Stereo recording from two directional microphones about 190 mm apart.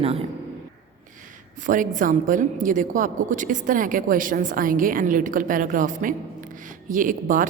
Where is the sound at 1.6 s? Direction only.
45° right (ahead or behind).